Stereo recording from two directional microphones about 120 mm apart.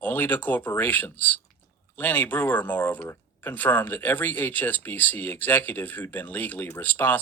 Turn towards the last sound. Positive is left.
turn(degrees=15)  # may be behind; listen again after turning